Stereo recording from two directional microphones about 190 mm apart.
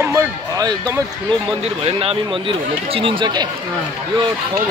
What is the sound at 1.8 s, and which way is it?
Speech, 30° right (ahead or behind).